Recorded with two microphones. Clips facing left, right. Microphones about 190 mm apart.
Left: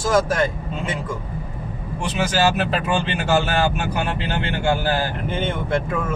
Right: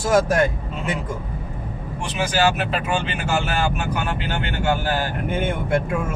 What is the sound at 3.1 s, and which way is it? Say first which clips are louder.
Speech: left 4 dB; 35° left (ahead or behind).